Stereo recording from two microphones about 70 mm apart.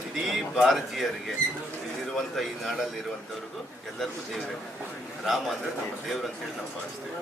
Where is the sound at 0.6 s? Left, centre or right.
Centre.